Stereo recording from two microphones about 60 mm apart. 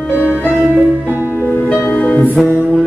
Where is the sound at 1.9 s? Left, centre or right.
Left.